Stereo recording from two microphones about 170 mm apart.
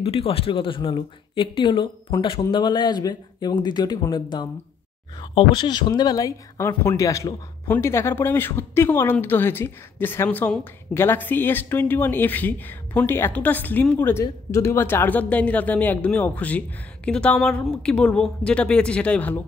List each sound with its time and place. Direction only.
0.0 s speech: 35° left (ahead or behind); by 19.4 s 10° left (ahead or behind)